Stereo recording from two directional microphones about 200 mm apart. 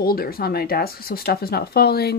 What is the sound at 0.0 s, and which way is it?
Speech, 50° left (ahead or behind).